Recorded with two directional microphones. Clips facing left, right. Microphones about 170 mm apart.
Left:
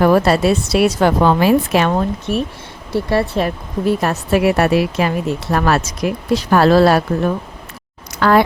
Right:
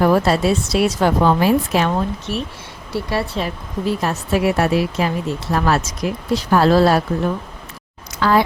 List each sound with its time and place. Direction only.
0.0 s a woman's voice: 65° left (ahead or behind)
8.2 s a woman's voice: 60° left (ahead or behind)